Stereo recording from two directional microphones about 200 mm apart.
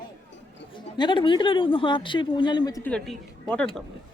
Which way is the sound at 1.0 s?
25° left (ahead or behind).